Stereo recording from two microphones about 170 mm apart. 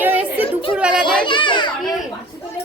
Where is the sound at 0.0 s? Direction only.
10° right (ahead or behind).